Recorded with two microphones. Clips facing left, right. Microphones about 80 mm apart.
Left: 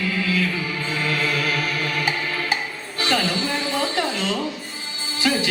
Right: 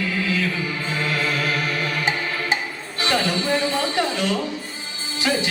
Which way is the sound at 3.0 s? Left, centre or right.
Right.